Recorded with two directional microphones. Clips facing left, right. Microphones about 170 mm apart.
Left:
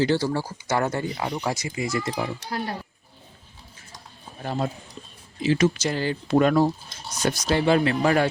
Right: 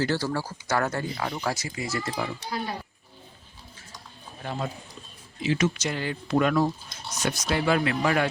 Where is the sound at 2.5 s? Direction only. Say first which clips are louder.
Left 2 dB; 65° left (ahead or behind).